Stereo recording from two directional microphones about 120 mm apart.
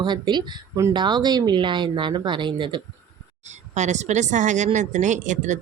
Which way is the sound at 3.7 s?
75° right (ahead or behind).